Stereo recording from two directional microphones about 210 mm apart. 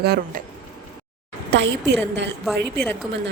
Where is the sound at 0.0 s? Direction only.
50° right (ahead or behind).